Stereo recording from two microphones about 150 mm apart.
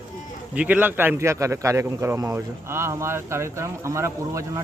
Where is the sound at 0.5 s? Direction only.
10° right (ahead or behind).